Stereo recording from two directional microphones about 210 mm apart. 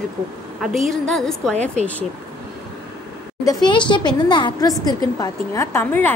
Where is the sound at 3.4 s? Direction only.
20° left (ahead or behind).